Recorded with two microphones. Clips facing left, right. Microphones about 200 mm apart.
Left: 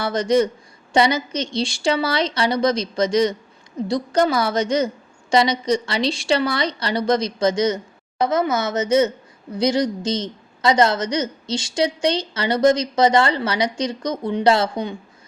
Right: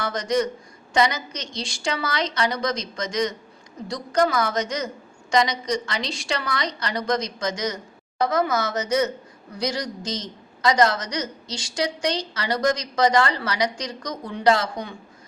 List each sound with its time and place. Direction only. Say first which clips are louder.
0.0 s a woman's voice: left 5 dB; 30° left (ahead or behind)